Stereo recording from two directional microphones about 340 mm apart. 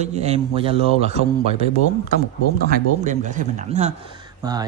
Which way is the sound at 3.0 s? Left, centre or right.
Right.